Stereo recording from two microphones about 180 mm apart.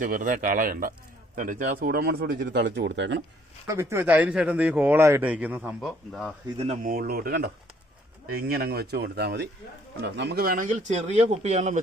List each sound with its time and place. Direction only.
0.0 s speech: 50° right (ahead or behind); by 3.2 s 80° right
3.7 s speech: 15° right (ahead or behind); by 6.3 s centre (ahead or behind)
6.8 s speech: 55° right (ahead or behind); by 11.8 s 40° right (ahead or behind)